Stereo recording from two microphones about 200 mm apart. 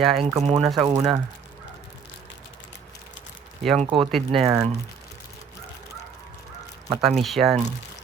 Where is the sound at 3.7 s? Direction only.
25° right (ahead or behind).